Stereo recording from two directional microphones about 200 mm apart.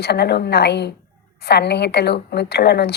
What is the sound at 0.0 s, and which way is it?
A woman's voice, 55° left (ahead or behind).